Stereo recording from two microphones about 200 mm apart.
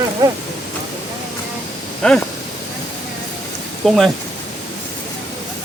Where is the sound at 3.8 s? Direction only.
Centre (ahead or behind).